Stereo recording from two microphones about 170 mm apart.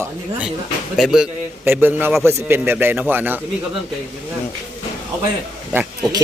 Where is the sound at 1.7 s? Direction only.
10° right (ahead or behind).